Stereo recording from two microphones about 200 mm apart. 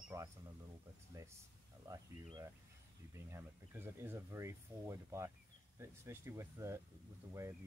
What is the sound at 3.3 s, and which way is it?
Speech, 10° right (ahead or behind).